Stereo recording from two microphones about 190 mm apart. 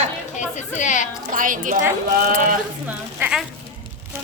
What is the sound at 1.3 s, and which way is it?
Speech, 45° right (ahead or behind).